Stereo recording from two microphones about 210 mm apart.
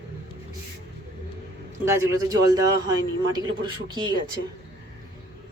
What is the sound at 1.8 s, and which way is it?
A man's voice, 15° right (ahead or behind).